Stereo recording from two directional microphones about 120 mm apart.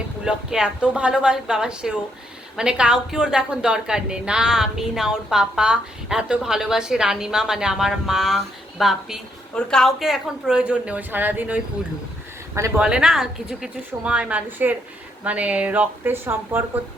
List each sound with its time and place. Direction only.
0.3 s a woman's voice: 5° right (ahead or behind); by 12.8 s 25° right (ahead or behind)
12.8 s a woman's voice: 5° right (ahead or behind)